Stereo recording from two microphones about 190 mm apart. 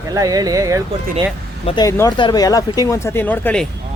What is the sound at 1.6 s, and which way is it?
Speech, 20° left (ahead or behind).